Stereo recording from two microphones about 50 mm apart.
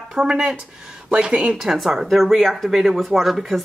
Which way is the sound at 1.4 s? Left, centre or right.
Centre.